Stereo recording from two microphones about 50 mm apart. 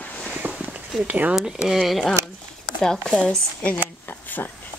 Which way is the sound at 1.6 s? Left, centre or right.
Centre.